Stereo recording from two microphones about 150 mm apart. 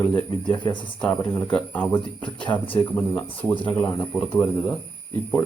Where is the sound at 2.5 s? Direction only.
35° left (ahead or behind).